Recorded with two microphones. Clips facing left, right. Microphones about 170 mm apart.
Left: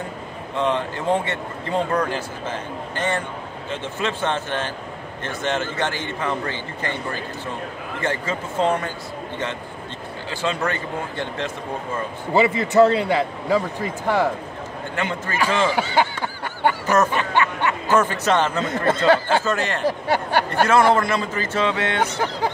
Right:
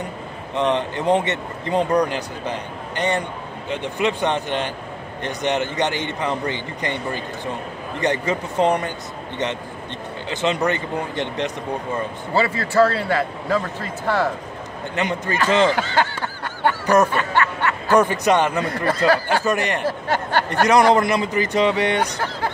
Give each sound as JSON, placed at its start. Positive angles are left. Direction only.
{"t": 0.6, "sound": "a man's voice", "side_deg": -20}
{"t": 8.0, "sound": "a man's voice", "side_deg": -20}
{"t": 10.3, "sound": "a man's voice", "side_deg": -20}
{"t": 12.4, "sound": "a man's voice", "side_deg": 20}
{"t": 15.0, "sound": "a man's voice", "side_deg": -15}
{"t": 15.7, "sound": "snicker", "side_deg": 15}
{"t": 16.8, "sound": "snicker", "side_deg": -15}
{"t": 17.1, "sound": "snicker", "side_deg": 15}
{"t": 17.9, "sound": "a man's voice", "side_deg": -15}
{"t": 18.9, "sound": "speech", "side_deg": 25}
{"t": 19.4, "sound": "a man's voice", "side_deg": -15}
{"t": 19.8, "sound": "a man's voice", "side_deg": 15}
{"t": 20.6, "sound": "a man's voice", "side_deg": -15}